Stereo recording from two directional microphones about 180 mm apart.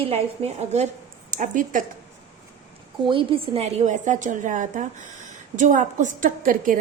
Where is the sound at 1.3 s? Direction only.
45° right (ahead or behind).